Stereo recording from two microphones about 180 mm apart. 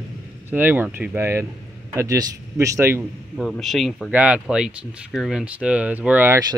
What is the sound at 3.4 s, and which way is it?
Speech, centre (ahead or behind).